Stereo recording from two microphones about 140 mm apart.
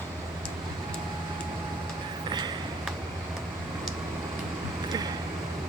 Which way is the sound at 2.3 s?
30° right (ahead or behind).